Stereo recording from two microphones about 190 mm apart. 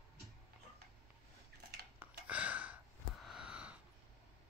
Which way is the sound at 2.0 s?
5° right (ahead or behind).